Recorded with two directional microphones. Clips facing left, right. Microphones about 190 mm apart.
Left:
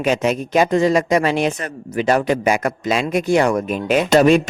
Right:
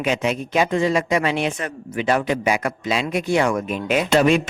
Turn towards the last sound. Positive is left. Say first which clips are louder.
# left 4 dB
turn(degrees=40)  # may be behind; listen again after turning